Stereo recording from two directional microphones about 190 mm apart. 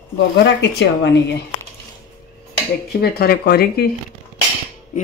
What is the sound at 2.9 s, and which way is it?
Speech, 55° left (ahead or behind).